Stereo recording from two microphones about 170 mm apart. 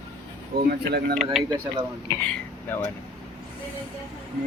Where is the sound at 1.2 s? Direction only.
Centre (ahead or behind).